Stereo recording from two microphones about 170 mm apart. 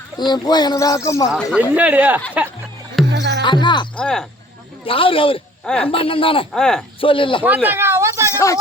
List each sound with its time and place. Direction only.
0.2 s speech: 25° left (ahead or behind)
1.3 s speech: 5° right (ahead or behind)
3.1 s music: 90° right
3.4 s speech: 25° left (ahead or behind)
3.9 s speech: 5° left (ahead or behind)
4.9 s speech: 30° left (ahead or behind)
5.6 s speech: 5° left (ahead or behind)
5.9 s speech: 30° left (ahead or behind)
6.5 s speech: 5° left (ahead or behind)
7.0 s speech: 30° left (ahead or behind)
7.4 s cat: 10° right (ahead or behind)
8.3 s speech: 15° left (ahead or behind)